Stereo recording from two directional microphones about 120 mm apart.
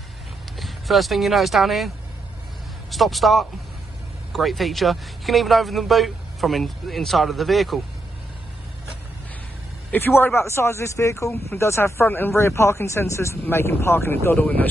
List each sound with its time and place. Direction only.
0.6 s speech: centre (ahead or behind)
2.9 s speech: centre (ahead or behind)
9.8 s speech: 15° left (ahead or behind)